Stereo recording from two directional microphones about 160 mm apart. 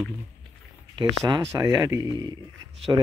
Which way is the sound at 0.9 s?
25° right (ahead or behind).